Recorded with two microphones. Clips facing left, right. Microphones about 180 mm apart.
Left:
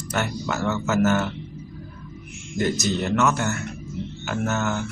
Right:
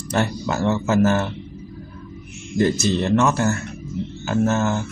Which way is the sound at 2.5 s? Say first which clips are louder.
Right 5 dB; 30° right (ahead or behind).